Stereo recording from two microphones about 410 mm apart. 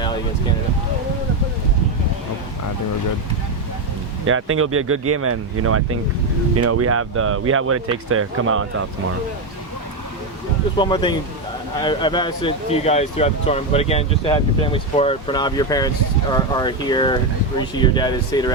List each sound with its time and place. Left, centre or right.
4.3 s speech: right
10.8 s speech: centre